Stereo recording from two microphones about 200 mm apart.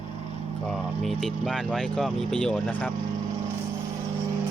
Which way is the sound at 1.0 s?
Centre (ahead or behind).